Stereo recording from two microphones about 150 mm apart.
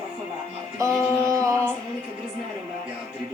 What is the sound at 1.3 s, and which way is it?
Female singing, 20° right (ahead or behind).